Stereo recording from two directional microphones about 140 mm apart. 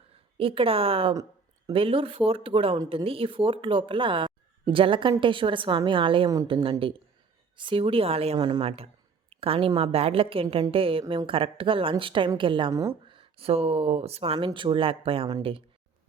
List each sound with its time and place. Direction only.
0.3 s speech: 40° right (ahead or behind)
8.4 s a woman's voice: 30° right (ahead or behind)
8.6 s a woman's voice: 45° right (ahead or behind)
12.7 s a woman's voice: 25° right (ahead or behind)
13.1 s speech: 40° right (ahead or behind)
14.3 s speech: 35° right (ahead or behind)